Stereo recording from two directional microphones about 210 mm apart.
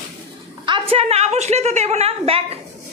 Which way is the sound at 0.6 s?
25° right (ahead or behind).